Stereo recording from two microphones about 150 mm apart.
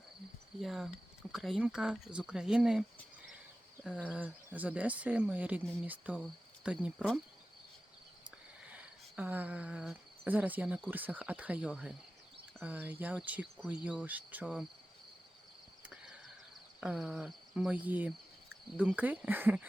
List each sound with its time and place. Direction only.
0.6 s speech: centre (ahead or behind)
4.1 s speech: 10° right (ahead or behind)
8.7 s speech: 10° right (ahead or behind)
16.8 s speech: 5° right (ahead or behind)